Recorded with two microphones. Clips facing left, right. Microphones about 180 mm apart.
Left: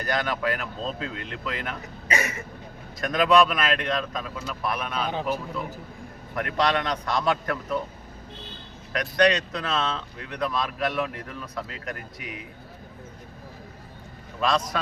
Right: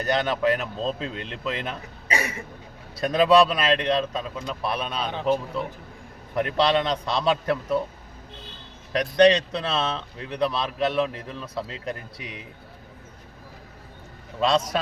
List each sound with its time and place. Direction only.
0.0 s speech: 25° right (ahead or behind)
8.9 s speech: 30° right (ahead or behind)
14.4 s speech: 25° right (ahead or behind)